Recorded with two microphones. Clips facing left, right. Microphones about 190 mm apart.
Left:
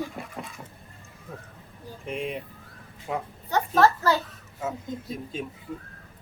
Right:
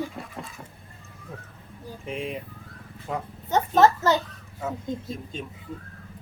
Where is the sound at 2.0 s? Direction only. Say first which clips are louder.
Left 1 dB; centre (ahead or behind).